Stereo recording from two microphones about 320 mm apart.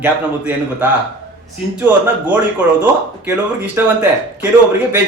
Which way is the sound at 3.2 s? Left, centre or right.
Centre.